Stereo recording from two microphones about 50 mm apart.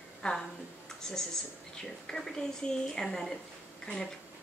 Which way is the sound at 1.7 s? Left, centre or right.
Centre.